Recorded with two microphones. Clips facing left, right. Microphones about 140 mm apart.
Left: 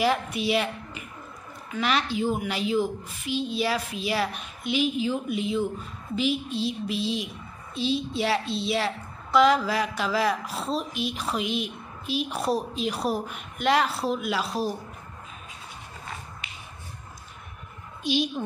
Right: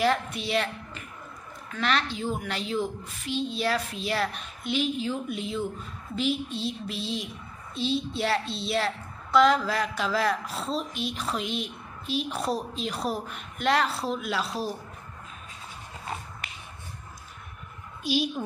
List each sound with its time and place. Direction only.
0.0 s a woman's voice: 5° left (ahead or behind)
16.4 s finger snapping: 55° right (ahead or behind)
18.0 s a woman's voice: 5° right (ahead or behind)